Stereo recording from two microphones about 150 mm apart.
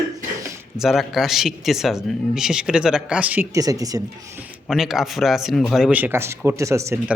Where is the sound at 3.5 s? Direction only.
25° right (ahead or behind).